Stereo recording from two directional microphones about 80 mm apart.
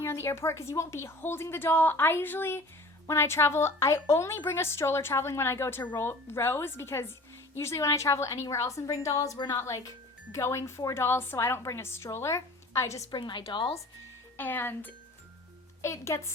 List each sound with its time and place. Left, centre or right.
0.0 s a woman's voice: left
13.1 s a woman's voice: left
14.3 s speech: left
15.8 s a woman's voice: left